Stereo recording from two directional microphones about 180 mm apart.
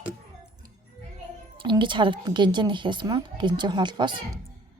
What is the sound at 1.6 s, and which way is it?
Speech, 25° right (ahead or behind).